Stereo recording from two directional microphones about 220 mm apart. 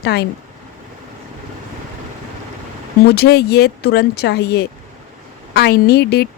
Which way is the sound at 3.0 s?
45° left (ahead or behind).